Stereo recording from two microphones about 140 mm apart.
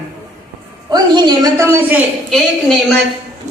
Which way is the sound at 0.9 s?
30° right (ahead or behind).